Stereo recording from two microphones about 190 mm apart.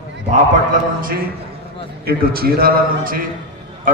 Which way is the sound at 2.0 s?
50° right (ahead or behind).